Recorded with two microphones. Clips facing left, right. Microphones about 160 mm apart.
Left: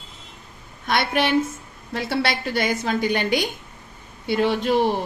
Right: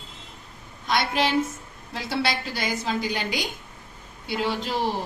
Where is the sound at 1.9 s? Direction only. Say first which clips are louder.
Left 3 dB; 60° left (ahead or behind).